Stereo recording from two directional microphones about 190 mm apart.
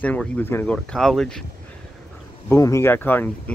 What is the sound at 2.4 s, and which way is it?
Speech, 15° left (ahead or behind).